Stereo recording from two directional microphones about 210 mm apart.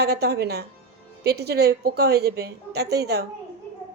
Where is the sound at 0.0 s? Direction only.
50° right (ahead or behind).